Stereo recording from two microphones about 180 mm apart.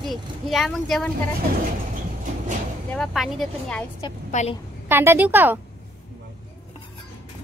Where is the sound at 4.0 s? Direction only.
35° left (ahead or behind).